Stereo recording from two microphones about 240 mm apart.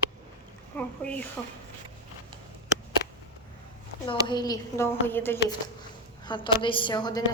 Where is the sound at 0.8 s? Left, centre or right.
Centre.